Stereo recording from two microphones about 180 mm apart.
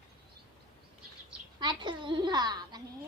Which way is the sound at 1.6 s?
25° right (ahead or behind).